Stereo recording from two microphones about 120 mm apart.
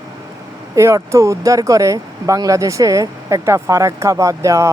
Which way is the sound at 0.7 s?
25° right (ahead or behind).